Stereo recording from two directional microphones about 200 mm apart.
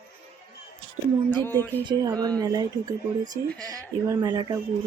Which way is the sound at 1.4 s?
10° left (ahead or behind).